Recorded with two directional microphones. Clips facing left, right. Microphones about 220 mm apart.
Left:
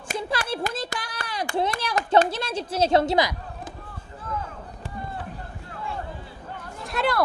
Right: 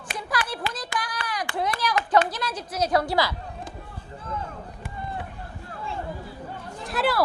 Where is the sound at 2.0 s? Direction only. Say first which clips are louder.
Left 4 dB; 25° left (ahead or behind).